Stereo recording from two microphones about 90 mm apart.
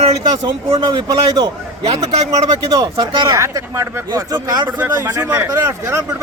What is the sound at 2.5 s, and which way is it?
Speech, 45° right (ahead or behind).